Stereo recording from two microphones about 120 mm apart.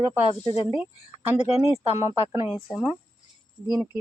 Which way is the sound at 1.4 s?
65° left (ahead or behind).